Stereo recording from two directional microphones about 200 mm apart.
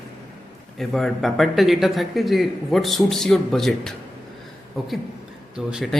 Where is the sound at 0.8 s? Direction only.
Centre (ahead or behind).